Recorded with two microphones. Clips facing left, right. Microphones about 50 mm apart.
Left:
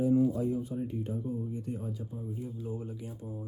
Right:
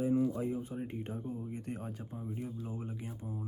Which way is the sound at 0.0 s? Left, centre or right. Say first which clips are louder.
Left 4 dB; right.